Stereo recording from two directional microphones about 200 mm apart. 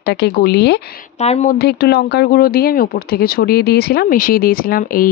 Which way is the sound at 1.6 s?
55° left (ahead or behind).